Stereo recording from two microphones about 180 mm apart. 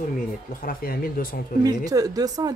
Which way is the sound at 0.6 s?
55° left (ahead or behind).